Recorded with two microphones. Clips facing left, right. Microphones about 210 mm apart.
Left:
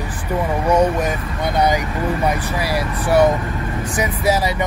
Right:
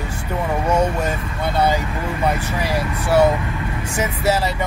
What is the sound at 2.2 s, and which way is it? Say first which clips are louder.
Speech: left 1 dB; 10° left (ahead or behind).